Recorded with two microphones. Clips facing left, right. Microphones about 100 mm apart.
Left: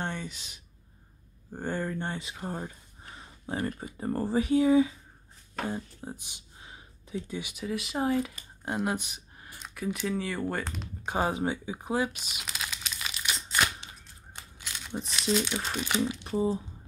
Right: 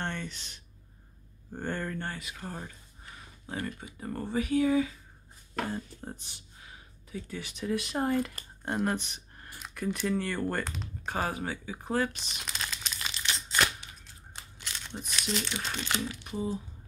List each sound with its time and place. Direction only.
0.0 s a sound: 10° left (ahead or behind)
1.5 s speech: 10° left (ahead or behind)
5.8 s speech: 5° left (ahead or behind)
7.5 s speech: centre (ahead or behind)
11.1 s crumpling: 20° left (ahead or behind)
15.5 s speech: 10° left (ahead or behind)
16.1 s speech: 25° left (ahead or behind)